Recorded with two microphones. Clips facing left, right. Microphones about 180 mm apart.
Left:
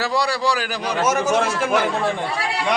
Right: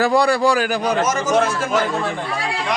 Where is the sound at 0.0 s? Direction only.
50° right (ahead or behind).